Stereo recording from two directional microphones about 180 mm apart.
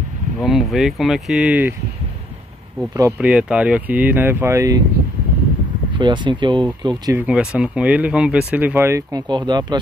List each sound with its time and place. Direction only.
0.4 s speech: centre (ahead or behind)
3.0 s speech: 10° right (ahead or behind)
5.9 s speech: 25° right (ahead or behind)
7.2 s speech: 5° right (ahead or behind); by 9.8 s 25° right (ahead or behind)